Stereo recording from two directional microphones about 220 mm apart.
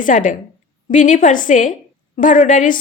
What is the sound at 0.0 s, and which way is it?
A woman's voice, 35° left (ahead or behind).